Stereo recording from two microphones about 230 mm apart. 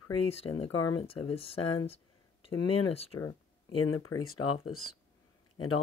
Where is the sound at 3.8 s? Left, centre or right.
Left.